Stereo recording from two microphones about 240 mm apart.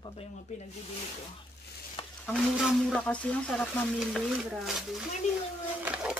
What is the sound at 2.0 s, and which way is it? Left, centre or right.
Stir, left.